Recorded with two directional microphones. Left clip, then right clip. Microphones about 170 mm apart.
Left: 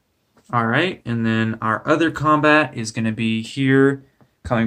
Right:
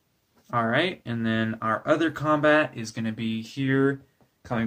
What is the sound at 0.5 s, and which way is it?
Speech, 5° left (ahead or behind).